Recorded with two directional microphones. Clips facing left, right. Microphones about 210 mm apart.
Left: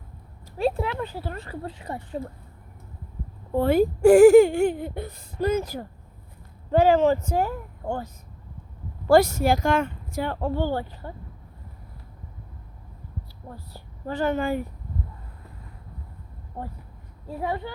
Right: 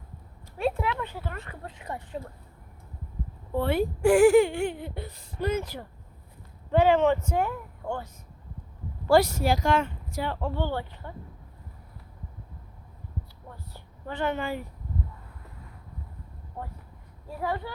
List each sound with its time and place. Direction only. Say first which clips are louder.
0.6 s speech: left 3 dB; 35° left (ahead or behind)
3.5 s a woman's voice: left 6 dB; 40° left (ahead or behind)
9.0 s a woman's voice: left 3 dB; 50° left (ahead or behind)
13.7 s a woman's voice: left 5 dB; 40° left (ahead or behind)
17.2 s speech: left 2 dB; 25° left (ahead or behind)